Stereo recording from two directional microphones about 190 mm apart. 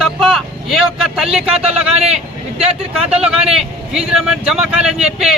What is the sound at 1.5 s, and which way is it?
Speech, 35° right (ahead or behind).